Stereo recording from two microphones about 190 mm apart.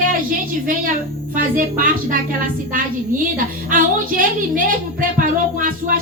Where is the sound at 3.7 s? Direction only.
45° right (ahead or behind).